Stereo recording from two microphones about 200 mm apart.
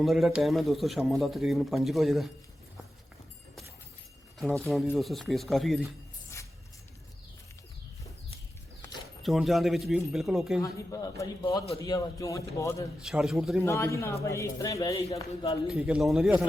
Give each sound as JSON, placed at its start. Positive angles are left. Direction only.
{"t": 0.0, "sound": "speech", "side_deg": 0}
{"t": 4.9, "sound": "speech", "side_deg": 0}
{"t": 6.3, "sound": "music", "side_deg": 15}
{"t": 9.2, "sound": "speech", "side_deg": 0}
{"t": 10.6, "sound": "a man's voice", "side_deg": 15}
{"t": 13.0, "sound": "speech", "side_deg": -5}
{"t": 13.7, "sound": "a man's voice", "side_deg": 15}
{"t": 15.6, "sound": "speech", "side_deg": -5}